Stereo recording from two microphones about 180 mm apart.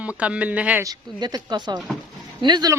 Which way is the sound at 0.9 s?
20° right (ahead or behind).